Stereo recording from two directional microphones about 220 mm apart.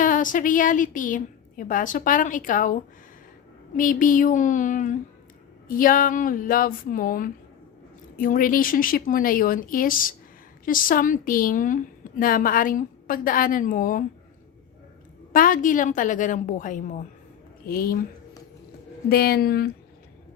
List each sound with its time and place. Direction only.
0.0 s a woman's voice: 35° left (ahead or behind)
3.8 s a woman's voice: 35° left (ahead or behind)
15.3 s a woman's voice: 40° left (ahead or behind)
19.0 s a woman's voice: 45° left (ahead or behind)